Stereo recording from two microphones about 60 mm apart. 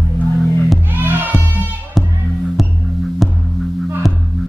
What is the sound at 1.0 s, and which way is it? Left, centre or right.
Music, right.